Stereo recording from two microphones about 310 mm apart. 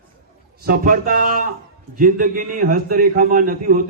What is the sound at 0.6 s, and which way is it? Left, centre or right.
A man's voice, right.